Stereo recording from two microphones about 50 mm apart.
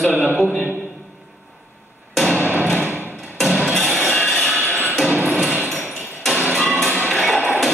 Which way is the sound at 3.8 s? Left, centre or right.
Centre.